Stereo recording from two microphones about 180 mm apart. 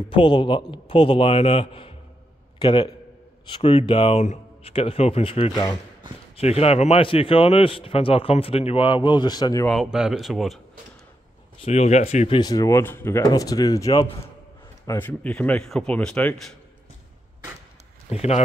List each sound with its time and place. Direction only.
0.1 s a man's voice: 25° left (ahead or behind)
9.7 s speech: centre (ahead or behind)
11.6 s speech: 40° left (ahead or behind)
12.4 s a man's voice: 20° left (ahead or behind)
18.1 s speech: 35° left (ahead or behind)